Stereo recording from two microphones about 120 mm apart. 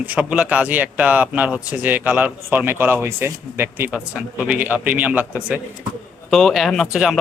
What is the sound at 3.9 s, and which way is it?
Speech, 10° right (ahead or behind).